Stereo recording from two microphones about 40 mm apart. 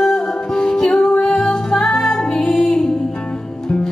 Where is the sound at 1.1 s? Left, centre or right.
Centre.